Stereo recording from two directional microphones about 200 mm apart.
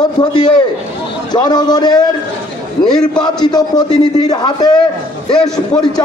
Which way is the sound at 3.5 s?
20° left (ahead or behind).